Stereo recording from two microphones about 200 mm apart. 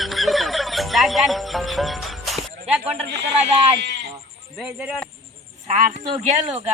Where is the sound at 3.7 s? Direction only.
60° right (ahead or behind).